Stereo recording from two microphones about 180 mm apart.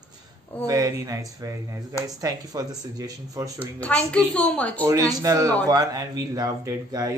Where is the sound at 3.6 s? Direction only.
10° left (ahead or behind).